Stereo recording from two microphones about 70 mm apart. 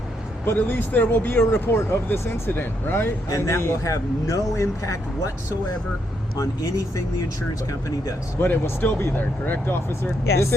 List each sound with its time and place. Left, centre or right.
0.4 s speech: left
3.2 s speech: left
6.3 s speech: left
8.4 s speech: left